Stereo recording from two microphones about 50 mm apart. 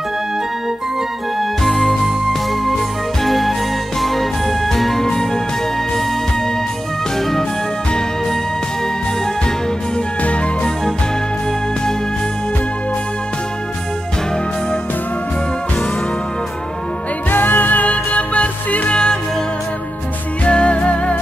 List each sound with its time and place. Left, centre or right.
1.4 s music: centre
7.2 s music: centre
10.2 s music: left
17.3 s music: left
20.4 s music: left